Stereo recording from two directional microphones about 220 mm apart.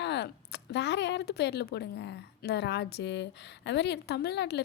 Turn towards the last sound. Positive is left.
turn(degrees=50)  # may be behind; listen again after turning